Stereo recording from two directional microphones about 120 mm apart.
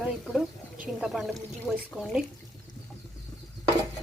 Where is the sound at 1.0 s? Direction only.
5° right (ahead or behind).